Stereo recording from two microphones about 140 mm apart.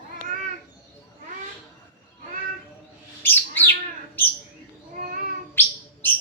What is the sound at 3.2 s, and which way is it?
Bird, 15° left (ahead or behind).